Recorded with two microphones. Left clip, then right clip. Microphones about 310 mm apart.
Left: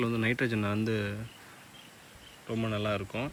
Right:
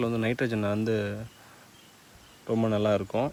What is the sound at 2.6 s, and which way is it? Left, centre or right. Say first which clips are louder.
Speech: right 7 dB; centre.